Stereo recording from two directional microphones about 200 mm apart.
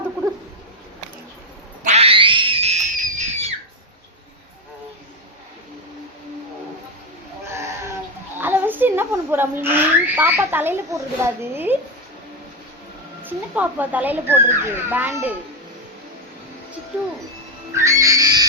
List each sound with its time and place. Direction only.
1.8 s screaming: 30° right (ahead or behind)
7.4 s cat: 15° right (ahead or behind)
8.4 s a sound: 10° right (ahead or behind)
11.5 s a child's voice: 10° right (ahead or behind)
13.2 s a child's voice: 10° right (ahead or behind)
17.7 s music: 15° right (ahead or behind)